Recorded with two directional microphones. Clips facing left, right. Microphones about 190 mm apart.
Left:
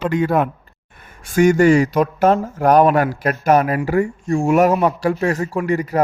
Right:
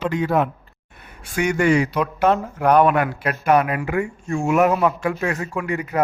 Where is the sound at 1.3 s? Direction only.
40° left (ahead or behind).